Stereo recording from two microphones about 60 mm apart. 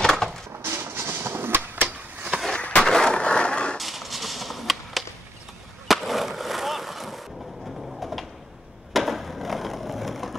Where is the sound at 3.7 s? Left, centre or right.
Centre.